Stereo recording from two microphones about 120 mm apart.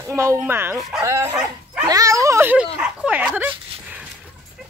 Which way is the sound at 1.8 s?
30° right (ahead or behind).